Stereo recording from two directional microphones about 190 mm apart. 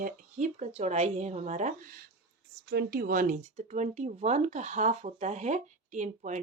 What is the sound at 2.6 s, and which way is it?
Speech, 55° right (ahead or behind).